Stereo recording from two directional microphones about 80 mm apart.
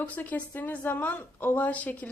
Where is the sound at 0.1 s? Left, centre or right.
Centre.